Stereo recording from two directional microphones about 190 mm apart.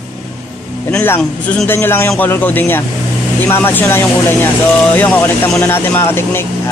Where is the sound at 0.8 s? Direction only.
10° left (ahead or behind).